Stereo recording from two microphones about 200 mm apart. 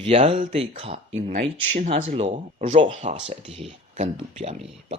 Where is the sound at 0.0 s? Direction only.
30° right (ahead or behind).